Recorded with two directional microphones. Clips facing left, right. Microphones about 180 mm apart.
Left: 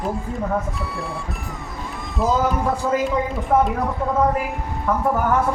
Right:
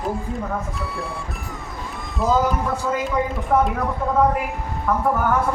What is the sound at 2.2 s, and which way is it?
Speech, centre (ahead or behind).